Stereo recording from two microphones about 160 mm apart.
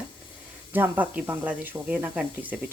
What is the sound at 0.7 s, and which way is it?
Speech, 10° right (ahead or behind).